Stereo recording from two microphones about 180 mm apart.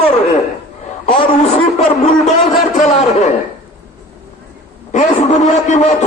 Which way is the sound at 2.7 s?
40° left (ahead or behind).